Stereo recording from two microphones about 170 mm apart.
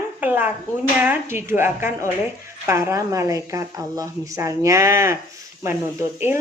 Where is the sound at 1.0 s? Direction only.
15° right (ahead or behind).